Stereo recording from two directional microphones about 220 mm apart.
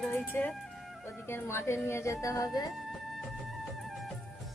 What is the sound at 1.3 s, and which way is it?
A woman's voice, 10° left (ahead or behind).